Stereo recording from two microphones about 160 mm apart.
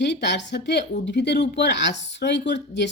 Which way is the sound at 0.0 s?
90° left.